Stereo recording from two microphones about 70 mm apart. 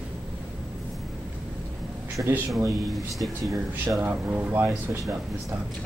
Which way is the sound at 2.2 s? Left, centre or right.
Right.